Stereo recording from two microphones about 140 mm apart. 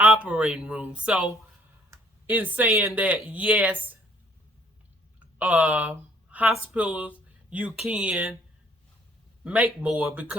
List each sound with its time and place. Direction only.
0.0 s speech: 10° right (ahead or behind)
5.4 s speech: 10° right (ahead or behind)
9.4 s a man's voice: 10° right (ahead or behind)